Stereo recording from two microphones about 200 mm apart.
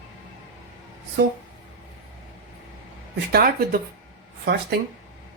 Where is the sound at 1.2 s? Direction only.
55° right (ahead or behind).